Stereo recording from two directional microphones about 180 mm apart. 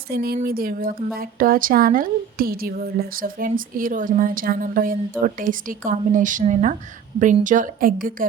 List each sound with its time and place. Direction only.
0.1 s a woman's voice: 60° right (ahead or behind)